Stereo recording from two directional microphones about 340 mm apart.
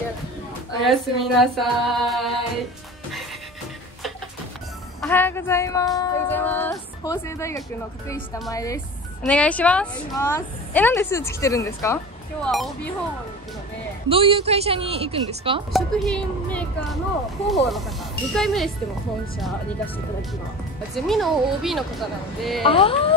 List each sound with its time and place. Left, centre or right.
0.8 s speech: centre
5.0 s speech: centre
14.0 s a woman's voice: centre
15.7 s speech: centre
20.9 s speech: centre
22.6 s speech: centre